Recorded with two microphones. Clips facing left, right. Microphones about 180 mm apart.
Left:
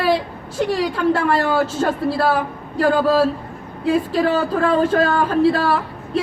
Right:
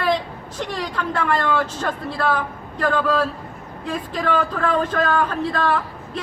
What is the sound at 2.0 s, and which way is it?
Speech, 30° left (ahead or behind).